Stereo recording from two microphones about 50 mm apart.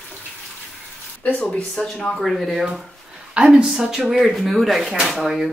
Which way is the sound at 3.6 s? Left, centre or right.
Centre.